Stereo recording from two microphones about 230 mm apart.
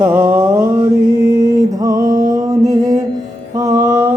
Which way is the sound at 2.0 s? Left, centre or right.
Right.